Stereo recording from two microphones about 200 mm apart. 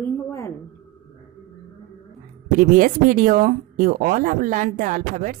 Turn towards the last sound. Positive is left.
turn(degrees=-40)  # may be behind; listen again after turning